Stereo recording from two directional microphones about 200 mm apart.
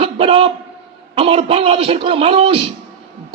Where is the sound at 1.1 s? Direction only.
30° right (ahead or behind).